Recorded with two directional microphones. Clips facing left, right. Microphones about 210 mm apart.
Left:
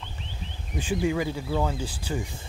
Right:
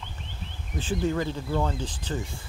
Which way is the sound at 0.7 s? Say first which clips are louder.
Left 1 dB; 10° left (ahead or behind).